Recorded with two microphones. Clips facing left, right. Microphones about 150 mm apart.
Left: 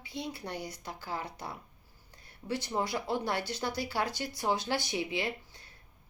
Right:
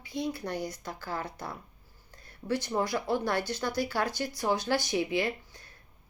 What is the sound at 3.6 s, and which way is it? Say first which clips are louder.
Speech: right 2 dB; 45° right (ahead or behind).